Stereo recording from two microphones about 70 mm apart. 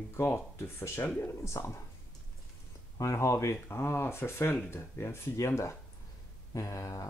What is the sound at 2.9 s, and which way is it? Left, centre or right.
Speech, left.